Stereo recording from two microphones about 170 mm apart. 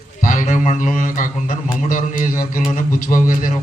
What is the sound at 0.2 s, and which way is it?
A man's voice, 50° left (ahead or behind).